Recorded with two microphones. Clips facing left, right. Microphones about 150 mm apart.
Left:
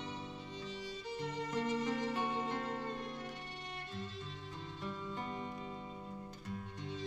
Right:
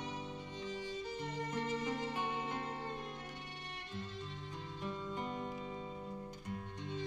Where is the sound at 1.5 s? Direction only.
15° right (ahead or behind).